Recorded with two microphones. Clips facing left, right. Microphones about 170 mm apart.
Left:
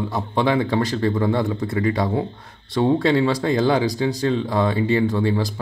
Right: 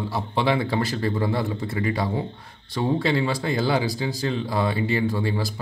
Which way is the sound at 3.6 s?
45° left (ahead or behind).